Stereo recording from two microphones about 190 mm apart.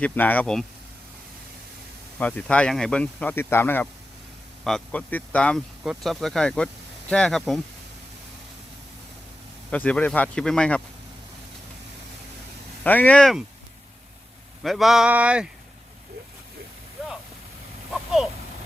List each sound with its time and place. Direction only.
0.0 s speech: 10° left (ahead or behind)
2.1 s speech: 10° left (ahead or behind)
9.7 s speech: 5° left (ahead or behind)
12.8 s speech: 10° left (ahead or behind)
14.6 s speech: centre (ahead or behind)
17.9 s a sound: centre (ahead or behind)